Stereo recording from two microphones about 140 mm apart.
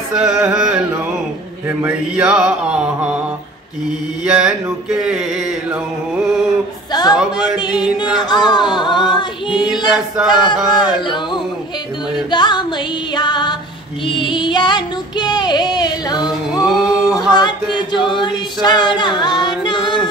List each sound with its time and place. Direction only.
0.1 s carnatic music: 5° right (ahead or behind)
1.8 s mantra: 10° right (ahead or behind)
4.2 s mantra: 5° right (ahead or behind)
4.8 s a sound: 5° right (ahead or behind)
6.9 s a sound: 30° left (ahead or behind)
8.2 s singing: 30° left (ahead or behind)
9.9 s a sound: 5° right (ahead or behind)
10.5 s a sound: 35° left (ahead or behind)
12.3 s music: 30° left (ahead or behind)
14.0 s female singing: 35° left (ahead or behind)
16.6 s music: centre (ahead or behind)
17.4 s singing: 35° left (ahead or behind)